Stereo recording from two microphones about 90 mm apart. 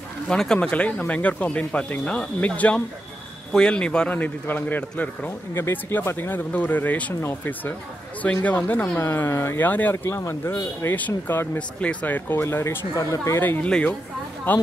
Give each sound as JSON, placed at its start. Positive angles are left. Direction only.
{"t": 0.3, "sound": "speech", "side_deg": 10}
{"t": 13.4, "sound": "speech", "side_deg": 20}
{"t": 13.7, "sound": "speech", "side_deg": 10}